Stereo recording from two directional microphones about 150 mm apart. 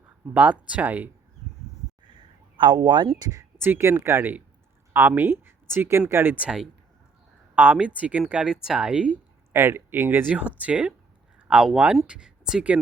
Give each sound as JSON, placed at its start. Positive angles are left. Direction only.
{"t": 0.3, "sound": "speech", "side_deg": -10}
{"t": 2.0, "sound": "a sound", "side_deg": -30}
{"t": 3.2, "sound": "speech", "side_deg": -20}